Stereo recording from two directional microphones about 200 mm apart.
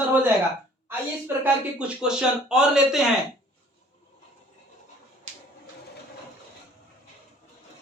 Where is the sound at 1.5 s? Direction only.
5° right (ahead or behind).